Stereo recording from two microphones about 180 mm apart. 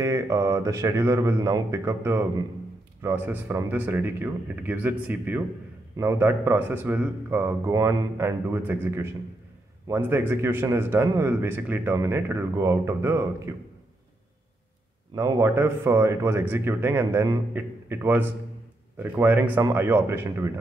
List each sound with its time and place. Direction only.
0.0 s speech: 15° right (ahead or behind)
15.1 s speech: 15° right (ahead or behind)